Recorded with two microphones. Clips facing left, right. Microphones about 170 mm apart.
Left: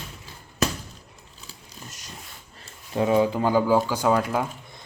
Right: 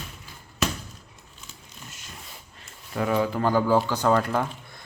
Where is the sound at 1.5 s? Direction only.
40° left (ahead or behind).